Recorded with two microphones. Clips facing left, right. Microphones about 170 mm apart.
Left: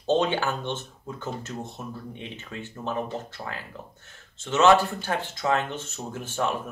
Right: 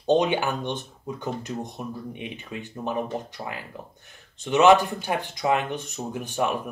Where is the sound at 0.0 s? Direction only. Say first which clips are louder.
Right 2 dB; 15° right (ahead or behind).